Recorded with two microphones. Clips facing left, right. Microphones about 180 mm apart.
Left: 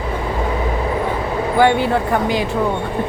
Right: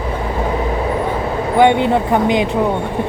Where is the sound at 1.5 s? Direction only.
20° right (ahead or behind).